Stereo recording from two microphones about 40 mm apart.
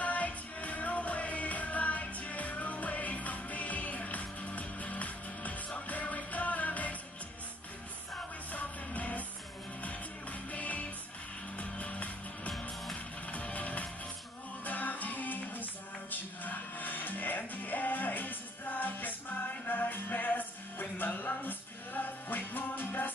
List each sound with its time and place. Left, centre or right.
0.0 s music: left
8.5 s music: left